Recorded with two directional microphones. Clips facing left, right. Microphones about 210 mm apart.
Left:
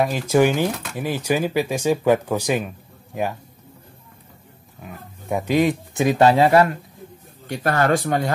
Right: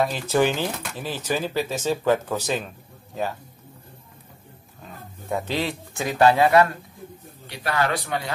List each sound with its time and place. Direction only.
0.0 s speech: 10° left (ahead or behind)
4.8 s speech: 15° left (ahead or behind)
7.4 s speech: 45° left (ahead or behind)